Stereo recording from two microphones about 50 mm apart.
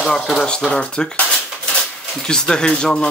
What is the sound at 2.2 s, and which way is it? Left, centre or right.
Speech, centre.